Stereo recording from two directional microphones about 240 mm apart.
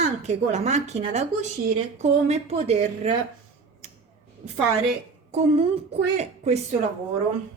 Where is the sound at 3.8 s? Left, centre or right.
Right.